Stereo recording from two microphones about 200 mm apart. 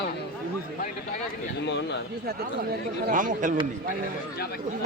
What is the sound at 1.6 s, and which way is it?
Speech, 60° left (ahead or behind).